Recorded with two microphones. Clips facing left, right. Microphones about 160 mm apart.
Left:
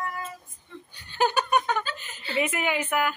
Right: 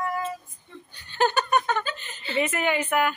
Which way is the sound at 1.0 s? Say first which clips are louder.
Right 1 dB; 10° left (ahead or behind).